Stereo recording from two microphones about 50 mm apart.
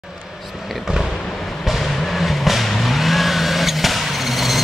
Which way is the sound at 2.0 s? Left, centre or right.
Centre.